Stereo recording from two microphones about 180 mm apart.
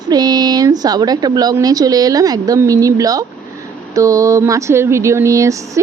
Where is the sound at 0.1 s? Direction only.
20° right (ahead or behind).